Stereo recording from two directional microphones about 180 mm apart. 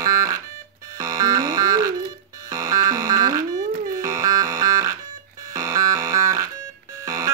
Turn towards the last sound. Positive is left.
turn(degrees=-15)  # may be behind; listen again after turning